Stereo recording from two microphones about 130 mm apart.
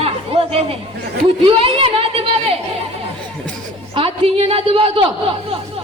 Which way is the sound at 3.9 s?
45° right (ahead or behind).